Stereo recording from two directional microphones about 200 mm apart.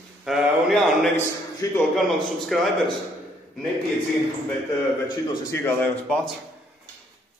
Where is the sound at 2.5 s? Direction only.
Centre (ahead or behind).